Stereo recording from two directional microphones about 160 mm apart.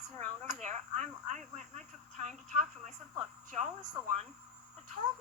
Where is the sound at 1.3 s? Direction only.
45° right (ahead or behind).